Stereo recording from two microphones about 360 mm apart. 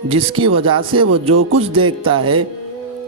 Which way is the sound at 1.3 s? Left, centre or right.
Right.